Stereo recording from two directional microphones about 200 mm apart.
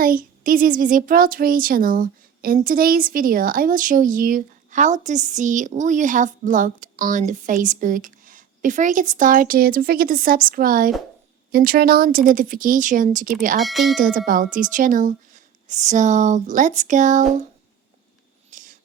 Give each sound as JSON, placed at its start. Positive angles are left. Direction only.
{"t": 0.0, "sound": "a woman's voice", "side_deg": -45}
{"t": 13.6, "sound": "speech", "side_deg": 0}
{"t": 14.0, "sound": "speech", "side_deg": -45}
{"t": 18.5, "sound": "a sound", "side_deg": -40}